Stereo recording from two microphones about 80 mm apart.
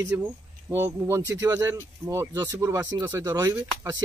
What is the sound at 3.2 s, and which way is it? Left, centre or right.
Speech, right.